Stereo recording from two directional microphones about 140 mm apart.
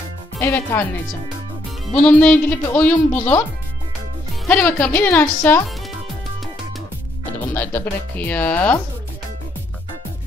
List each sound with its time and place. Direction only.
0.4 s speech: 20° left (ahead or behind)
1.9 s speech: 10° left (ahead or behind)
4.5 s speech: 10° left (ahead or behind)
7.3 s speech: 15° left (ahead or behind)